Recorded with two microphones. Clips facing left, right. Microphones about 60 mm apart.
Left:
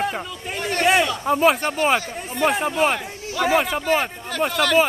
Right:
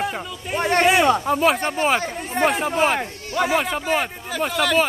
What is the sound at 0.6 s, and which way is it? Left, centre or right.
Speech, right.